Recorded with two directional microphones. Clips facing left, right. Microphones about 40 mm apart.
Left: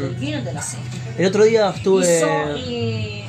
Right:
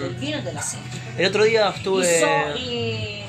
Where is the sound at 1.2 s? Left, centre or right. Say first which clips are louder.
Left 3 dB; right.